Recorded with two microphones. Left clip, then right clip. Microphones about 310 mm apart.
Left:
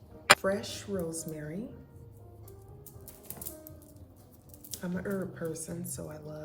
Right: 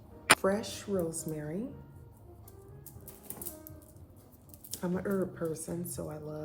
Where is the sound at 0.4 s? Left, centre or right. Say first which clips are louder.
Right 1 dB; centre.